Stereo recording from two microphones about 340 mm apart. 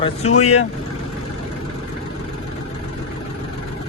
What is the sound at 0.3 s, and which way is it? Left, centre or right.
Speech, centre.